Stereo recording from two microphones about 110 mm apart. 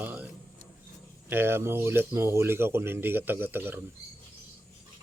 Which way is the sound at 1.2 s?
20° right (ahead or behind).